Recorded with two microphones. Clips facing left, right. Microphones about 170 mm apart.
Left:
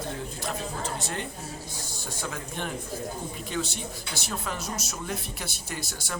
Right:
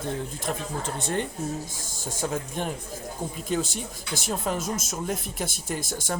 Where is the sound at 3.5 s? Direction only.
45° right (ahead or behind).